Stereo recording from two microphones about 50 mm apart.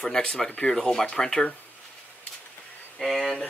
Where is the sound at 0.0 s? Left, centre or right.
Centre.